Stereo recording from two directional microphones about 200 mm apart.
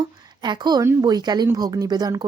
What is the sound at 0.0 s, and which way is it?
A woman's voice, 20° right (ahead or behind).